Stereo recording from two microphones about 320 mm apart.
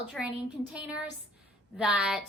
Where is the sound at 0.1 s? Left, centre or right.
Centre.